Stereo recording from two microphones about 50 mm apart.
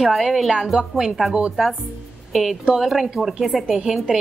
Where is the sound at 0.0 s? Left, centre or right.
Centre.